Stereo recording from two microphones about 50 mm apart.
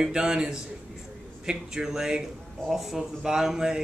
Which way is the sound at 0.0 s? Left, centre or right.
Centre.